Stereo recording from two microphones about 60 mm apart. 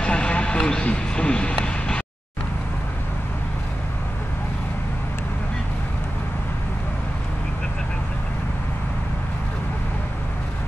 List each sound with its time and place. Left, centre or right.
0.0 s vehicle: centre
0.8 s speech: centre